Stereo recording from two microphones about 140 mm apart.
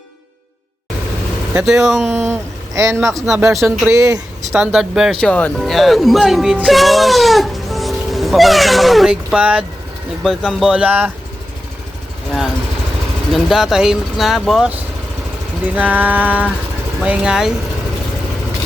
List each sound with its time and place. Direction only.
1.5 s speech: 5° right (ahead or behind)
2.0 s speech: 20° right (ahead or behind)
4.5 s speech: 5° right (ahead or behind)
5.2 s speech: 5° left (ahead or behind); by 11.1 s 10° right (ahead or behind)
13.3 s speech: centre (ahead or behind)